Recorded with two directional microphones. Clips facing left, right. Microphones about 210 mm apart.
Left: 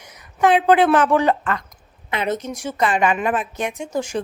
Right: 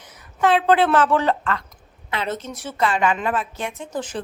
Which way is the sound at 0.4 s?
15° left (ahead or behind).